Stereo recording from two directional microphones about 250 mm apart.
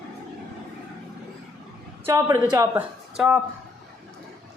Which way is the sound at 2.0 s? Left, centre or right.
Centre.